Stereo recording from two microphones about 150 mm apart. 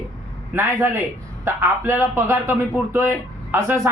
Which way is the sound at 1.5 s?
15° right (ahead or behind).